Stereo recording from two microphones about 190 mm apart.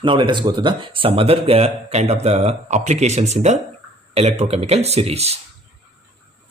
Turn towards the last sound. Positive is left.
turn(degrees=-35)  # may be behind; listen again after turning